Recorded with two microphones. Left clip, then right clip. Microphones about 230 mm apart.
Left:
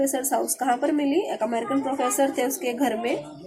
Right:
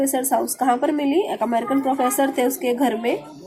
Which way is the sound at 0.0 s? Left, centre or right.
Centre.